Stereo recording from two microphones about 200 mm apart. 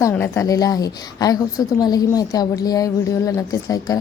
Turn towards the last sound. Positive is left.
turn(degrees=15)  # may be behind; listen again after turning